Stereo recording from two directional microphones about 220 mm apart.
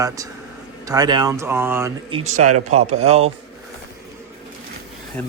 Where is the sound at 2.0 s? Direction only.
30° right (ahead or behind).